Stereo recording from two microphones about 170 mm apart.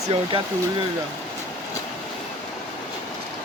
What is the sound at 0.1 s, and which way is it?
Speech, 30° right (ahead or behind).